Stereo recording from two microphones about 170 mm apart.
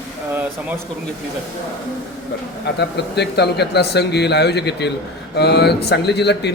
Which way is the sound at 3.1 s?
80° left.